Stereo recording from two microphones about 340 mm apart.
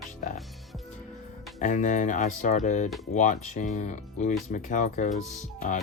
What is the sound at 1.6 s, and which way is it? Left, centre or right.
Speech, left.